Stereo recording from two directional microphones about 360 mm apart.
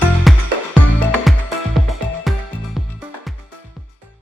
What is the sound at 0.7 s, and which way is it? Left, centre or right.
Music, centre.